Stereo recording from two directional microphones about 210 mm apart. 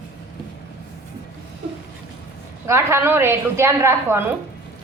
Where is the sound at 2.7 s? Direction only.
10° right (ahead or behind).